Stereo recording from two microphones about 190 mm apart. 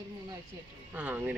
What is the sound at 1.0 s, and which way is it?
Speech, 5° right (ahead or behind).